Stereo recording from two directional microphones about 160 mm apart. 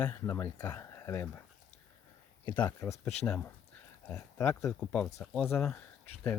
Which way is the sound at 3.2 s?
5° left (ahead or behind).